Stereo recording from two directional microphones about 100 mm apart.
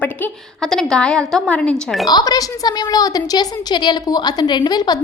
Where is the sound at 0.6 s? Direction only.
5° left (ahead or behind).